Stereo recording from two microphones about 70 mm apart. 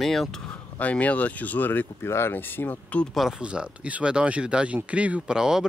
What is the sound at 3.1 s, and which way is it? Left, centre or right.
Speech, centre.